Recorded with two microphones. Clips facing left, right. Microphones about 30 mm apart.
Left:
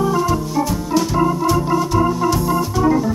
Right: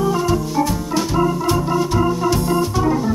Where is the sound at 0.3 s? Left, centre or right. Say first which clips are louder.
Right 1 dB; centre.